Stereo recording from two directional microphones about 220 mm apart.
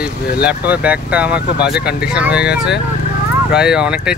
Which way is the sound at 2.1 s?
5° right (ahead or behind).